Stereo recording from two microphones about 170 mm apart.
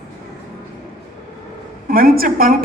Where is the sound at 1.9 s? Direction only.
60° right (ahead or behind).